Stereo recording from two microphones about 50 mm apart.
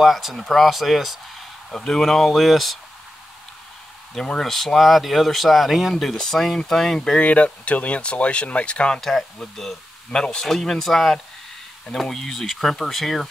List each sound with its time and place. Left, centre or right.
0.0 s speech: centre
4.2 s speech: centre
7.2 s speech: left
9.4 s speech: centre